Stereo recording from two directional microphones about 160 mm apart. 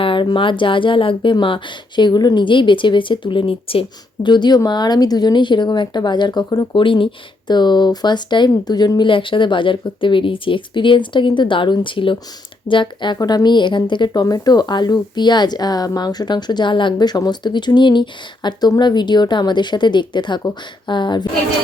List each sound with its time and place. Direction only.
0.0 s a woman's voice: 30° left (ahead or behind)